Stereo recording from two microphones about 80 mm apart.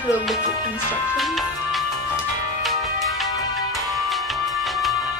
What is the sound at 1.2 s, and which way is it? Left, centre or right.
Music, centre.